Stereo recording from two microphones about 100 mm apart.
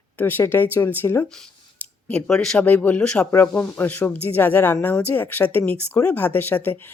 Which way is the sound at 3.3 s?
25° left (ahead or behind).